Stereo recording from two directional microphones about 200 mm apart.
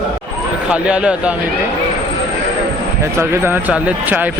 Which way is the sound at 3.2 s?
10° right (ahead or behind).